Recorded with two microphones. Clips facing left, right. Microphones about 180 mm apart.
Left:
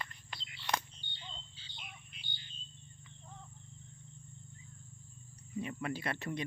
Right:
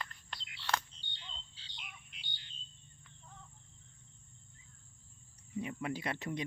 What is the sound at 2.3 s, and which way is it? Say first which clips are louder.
Bird: left 2 dB; 70° right (ahead or behind).